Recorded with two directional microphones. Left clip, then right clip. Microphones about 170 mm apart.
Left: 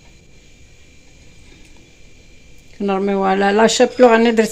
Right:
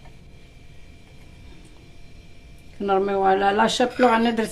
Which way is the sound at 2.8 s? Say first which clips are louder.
Left 2 dB; 20° left (ahead or behind).